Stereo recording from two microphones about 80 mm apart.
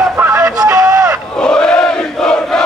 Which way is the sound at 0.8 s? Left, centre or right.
Right.